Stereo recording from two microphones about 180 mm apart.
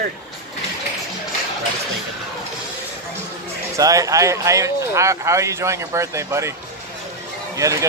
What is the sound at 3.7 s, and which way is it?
Speech, 20° right (ahead or behind).